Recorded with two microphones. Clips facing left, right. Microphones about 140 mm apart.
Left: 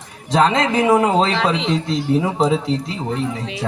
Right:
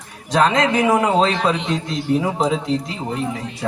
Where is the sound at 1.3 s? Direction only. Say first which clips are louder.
Left 1 dB; 90° left.